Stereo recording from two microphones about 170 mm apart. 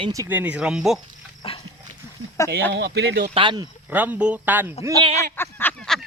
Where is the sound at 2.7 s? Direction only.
75° right (ahead or behind).